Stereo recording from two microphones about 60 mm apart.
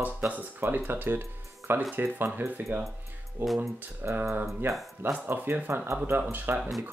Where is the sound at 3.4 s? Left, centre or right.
Centre.